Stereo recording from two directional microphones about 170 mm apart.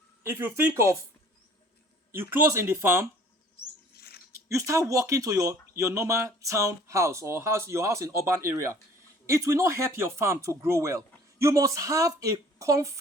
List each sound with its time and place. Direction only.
0.2 s speech: 15° right (ahead or behind)
2.1 s speech: 15° right (ahead or behind)
3.9 s a sound: 65° left (ahead or behind)
4.4 s a woman's voice: 20° right (ahead or behind)